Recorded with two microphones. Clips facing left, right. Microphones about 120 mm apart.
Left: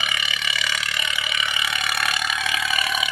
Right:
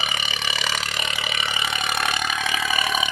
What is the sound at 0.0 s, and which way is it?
Burping, 35° right (ahead or behind).